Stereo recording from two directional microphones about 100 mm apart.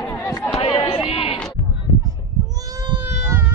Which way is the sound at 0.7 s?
60° left (ahead or behind).